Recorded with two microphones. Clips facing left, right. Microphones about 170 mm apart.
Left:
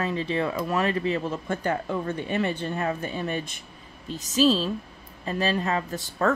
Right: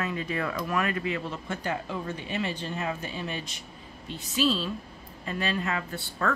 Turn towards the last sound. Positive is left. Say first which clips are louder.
# left 5 dB
turn(degrees=40)  # may be behind; listen again after turning